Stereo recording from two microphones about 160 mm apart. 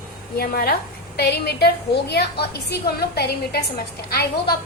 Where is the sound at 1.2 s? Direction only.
85° left.